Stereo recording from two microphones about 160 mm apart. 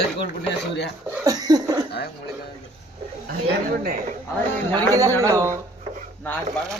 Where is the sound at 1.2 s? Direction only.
25° right (ahead or behind).